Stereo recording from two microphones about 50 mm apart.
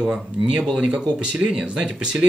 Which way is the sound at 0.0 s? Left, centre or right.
Centre.